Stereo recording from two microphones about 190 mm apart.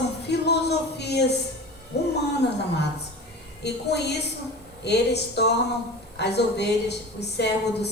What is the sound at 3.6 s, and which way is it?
A woman's voice, 60° left (ahead or behind).